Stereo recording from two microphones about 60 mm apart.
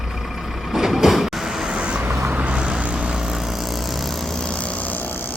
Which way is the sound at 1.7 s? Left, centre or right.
Centre.